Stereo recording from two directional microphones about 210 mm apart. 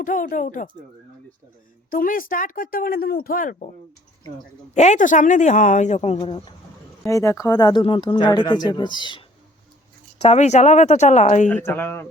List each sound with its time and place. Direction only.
0.0 s speech: 40° left (ahead or behind)
1.9 s speech: 40° left (ahead or behind)
4.7 s speech: 35° left (ahead or behind)
7.0 s speech: 15° left (ahead or behind)
10.2 s speech: 35° left (ahead or behind)
11.4 s speech: 10° left (ahead or behind)